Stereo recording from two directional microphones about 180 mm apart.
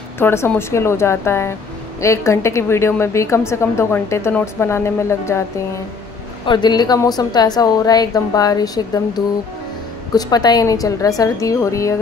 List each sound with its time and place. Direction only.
0.2 s a woman's voice: 15° left (ahead or behind)
6.4 s a woman's voice: 25° left (ahead or behind)